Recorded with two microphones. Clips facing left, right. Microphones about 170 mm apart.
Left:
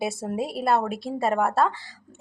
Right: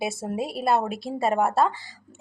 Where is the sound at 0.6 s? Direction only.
20° right (ahead or behind).